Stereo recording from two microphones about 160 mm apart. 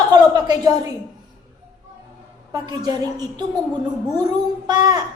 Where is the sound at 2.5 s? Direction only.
25° right (ahead or behind).